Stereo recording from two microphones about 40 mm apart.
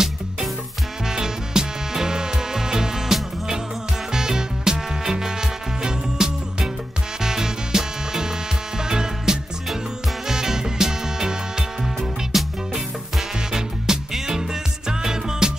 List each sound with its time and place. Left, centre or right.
1.0 s music: centre
12.0 s music: centre
13.5 s music: centre